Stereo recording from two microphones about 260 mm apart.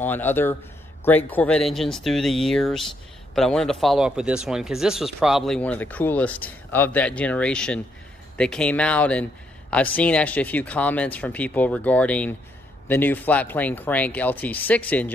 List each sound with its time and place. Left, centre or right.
0.0 s speech: centre